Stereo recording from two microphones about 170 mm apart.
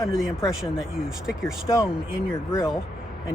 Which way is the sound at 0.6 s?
5° right (ahead or behind).